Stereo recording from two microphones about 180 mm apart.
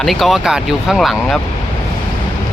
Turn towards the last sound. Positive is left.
turn(degrees=0)  # may be behind; listen again after turning